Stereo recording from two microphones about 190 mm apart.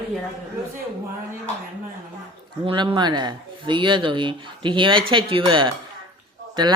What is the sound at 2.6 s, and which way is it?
Speech, 25° right (ahead or behind).